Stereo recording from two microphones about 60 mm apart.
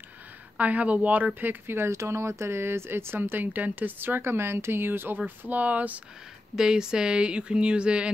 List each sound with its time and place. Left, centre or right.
0.6 s speech: right
1.9 s speech: right
6.5 s speech: centre